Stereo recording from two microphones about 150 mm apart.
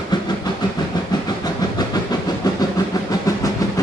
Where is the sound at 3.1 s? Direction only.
25° left (ahead or behind).